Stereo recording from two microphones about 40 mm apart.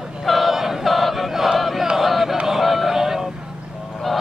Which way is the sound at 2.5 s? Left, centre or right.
Centre.